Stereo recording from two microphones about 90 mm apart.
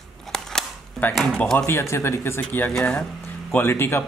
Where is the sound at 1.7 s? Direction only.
30° left (ahead or behind).